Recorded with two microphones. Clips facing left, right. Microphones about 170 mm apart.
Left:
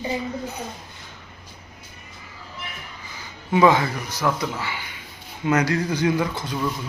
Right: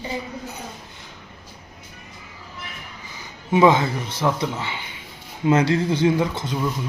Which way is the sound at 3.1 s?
20° right (ahead or behind).